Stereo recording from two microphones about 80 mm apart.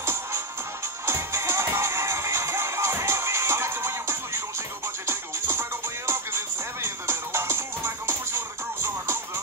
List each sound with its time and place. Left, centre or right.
0.0 s music: right